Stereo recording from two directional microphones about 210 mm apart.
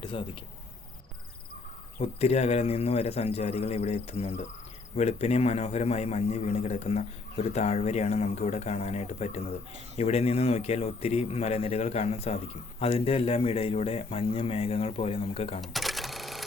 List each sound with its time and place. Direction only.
0.0 s speech: 25° left (ahead or behind)
2.0 s a man's voice: 30° left (ahead or behind)
15.6 s cash register: centre (ahead or behind)